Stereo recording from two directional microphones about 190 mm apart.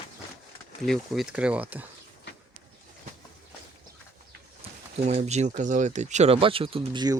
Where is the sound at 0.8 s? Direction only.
Centre (ahead or behind).